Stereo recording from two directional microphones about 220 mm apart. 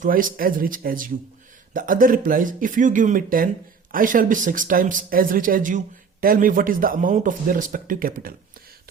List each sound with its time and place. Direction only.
0.0 s speech: 40° right (ahead or behind)